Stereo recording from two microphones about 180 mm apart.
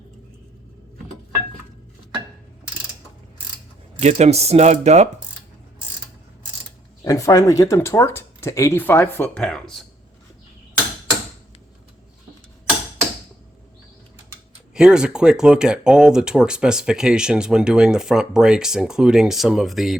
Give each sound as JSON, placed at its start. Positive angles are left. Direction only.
{"t": 4.0, "sound": "speech", "side_deg": -35}
{"t": 7.0, "sound": "speech", "side_deg": 20}
{"t": 14.7, "sound": "speech", "side_deg": -5}